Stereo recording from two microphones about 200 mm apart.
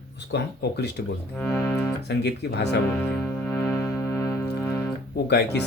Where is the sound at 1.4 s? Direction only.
10° left (ahead or behind).